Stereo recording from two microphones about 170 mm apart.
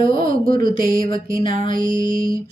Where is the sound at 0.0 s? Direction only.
30° left (ahead or behind).